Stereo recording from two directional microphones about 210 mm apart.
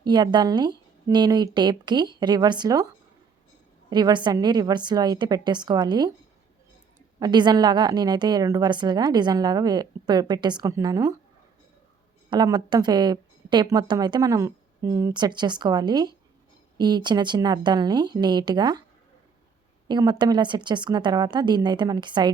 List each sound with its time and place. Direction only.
0.0 s a woman's voice: 20° right (ahead or behind)
7.2 s a woman's voice: 20° right (ahead or behind)
12.3 s a woman's voice: 20° right (ahead or behind)
19.9 s a woman's voice: 20° right (ahead or behind)